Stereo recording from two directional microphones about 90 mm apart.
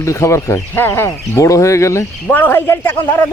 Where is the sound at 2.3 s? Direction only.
20° left (ahead or behind).